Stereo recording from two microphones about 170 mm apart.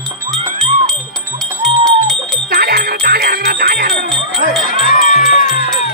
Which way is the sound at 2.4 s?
65° right (ahead or behind).